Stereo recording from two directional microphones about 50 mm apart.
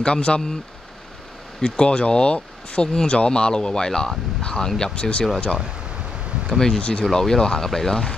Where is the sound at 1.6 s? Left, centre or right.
Centre.